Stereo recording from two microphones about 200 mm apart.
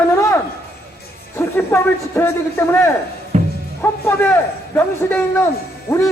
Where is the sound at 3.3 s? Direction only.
35° right (ahead or behind).